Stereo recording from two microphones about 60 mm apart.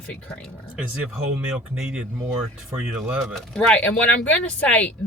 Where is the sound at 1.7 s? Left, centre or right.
Centre.